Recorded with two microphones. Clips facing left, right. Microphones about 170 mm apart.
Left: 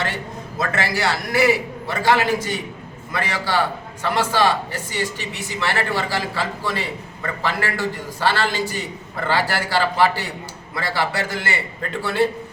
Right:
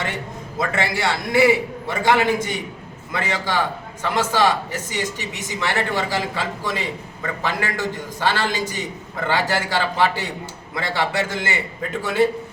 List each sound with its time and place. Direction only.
0.8 s a man's voice: 25° right (ahead or behind)